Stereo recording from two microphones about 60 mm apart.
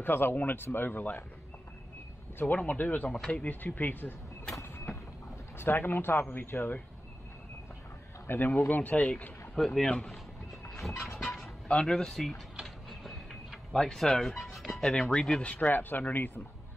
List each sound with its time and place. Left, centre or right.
0.0 s speech: left
2.5 s speech: left
3.4 s speech: left
5.6 s speech: left
8.3 s speech: left
9.6 s speech: centre
10.9 s a sound: left
11.6 s speech: centre
12.6 s mechanisms: centre
13.7 s speech: centre
15.4 s speech: left